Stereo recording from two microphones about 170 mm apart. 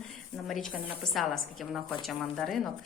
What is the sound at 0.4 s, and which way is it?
A woman's voice, centre (ahead or behind).